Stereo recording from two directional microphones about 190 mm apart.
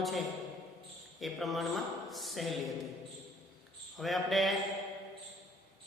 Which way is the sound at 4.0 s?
Centre (ahead or behind).